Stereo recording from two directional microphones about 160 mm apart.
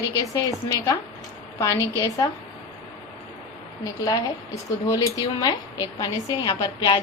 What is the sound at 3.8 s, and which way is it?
A woman's voice, 20° left (ahead or behind).